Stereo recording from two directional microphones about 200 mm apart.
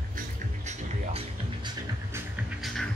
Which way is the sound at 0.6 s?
30° right (ahead or behind).